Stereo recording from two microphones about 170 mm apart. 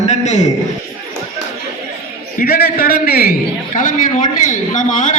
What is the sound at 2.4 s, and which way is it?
Speech, 60° left (ahead or behind).